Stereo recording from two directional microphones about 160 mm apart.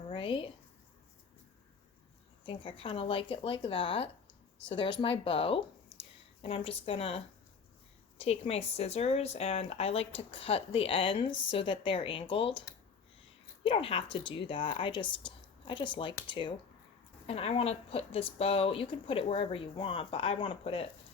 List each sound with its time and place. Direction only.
0.1 s a sound: 35° left (ahead or behind)
2.4 s speech: 30° left (ahead or behind)
8.2 s speech: 40° left (ahead or behind)
13.7 s speech: 35° left (ahead or behind)